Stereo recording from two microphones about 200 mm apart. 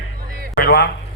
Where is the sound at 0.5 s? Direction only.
50° left (ahead or behind).